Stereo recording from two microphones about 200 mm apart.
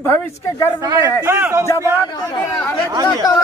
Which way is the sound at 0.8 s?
15° right (ahead or behind).